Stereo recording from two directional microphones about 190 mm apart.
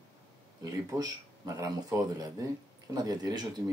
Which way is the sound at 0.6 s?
20° right (ahead or behind).